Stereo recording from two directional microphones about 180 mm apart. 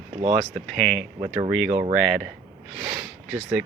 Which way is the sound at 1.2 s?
25° right (ahead or behind).